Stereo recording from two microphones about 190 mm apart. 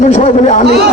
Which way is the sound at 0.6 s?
60° right (ahead or behind).